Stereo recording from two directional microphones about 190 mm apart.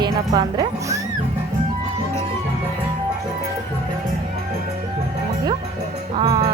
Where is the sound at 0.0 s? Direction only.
20° right (ahead or behind).